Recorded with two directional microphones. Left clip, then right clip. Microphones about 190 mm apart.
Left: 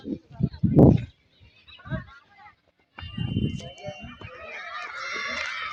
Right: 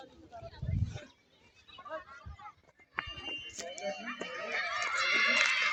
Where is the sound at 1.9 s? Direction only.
55° right (ahead or behind).